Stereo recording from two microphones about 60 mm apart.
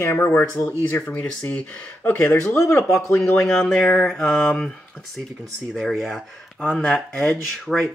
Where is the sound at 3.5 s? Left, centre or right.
Centre.